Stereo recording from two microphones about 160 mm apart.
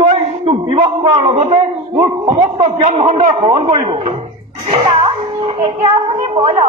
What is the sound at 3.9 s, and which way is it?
Music, 40° right (ahead or behind).